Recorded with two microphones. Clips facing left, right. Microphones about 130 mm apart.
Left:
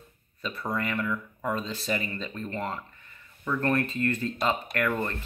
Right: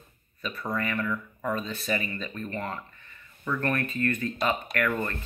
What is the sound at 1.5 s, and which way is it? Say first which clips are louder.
Speech: even; 30° left (ahead or behind).